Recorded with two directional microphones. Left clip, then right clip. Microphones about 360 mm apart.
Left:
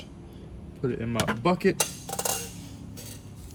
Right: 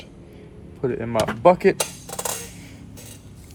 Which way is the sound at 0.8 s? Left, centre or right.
Centre.